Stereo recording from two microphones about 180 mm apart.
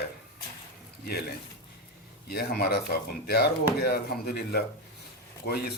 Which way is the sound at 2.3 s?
60° left (ahead or behind).